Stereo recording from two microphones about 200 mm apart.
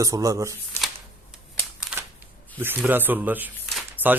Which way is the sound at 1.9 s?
Centre (ahead or behind).